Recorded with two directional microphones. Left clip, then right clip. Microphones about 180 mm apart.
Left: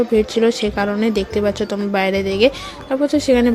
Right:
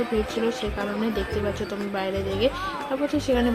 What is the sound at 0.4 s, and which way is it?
A woman's voice, 40° left (ahead or behind).